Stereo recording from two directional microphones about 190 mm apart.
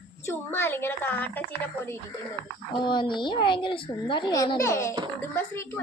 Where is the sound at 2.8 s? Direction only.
25° left (ahead or behind).